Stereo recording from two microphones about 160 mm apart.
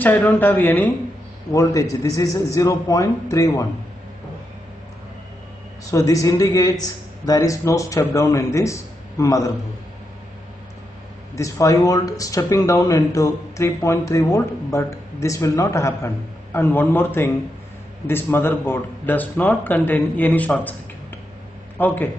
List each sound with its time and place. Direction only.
0.0 s speech: 10° left (ahead or behind)
5.9 s speech: 20° left (ahead or behind)
11.3 s speech: 20° left (ahead or behind)
21.7 s speech: 10° left (ahead or behind)